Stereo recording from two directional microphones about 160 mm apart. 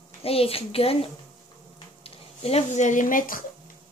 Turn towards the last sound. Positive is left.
turn(degrees=60)  # may be behind; listen again after turning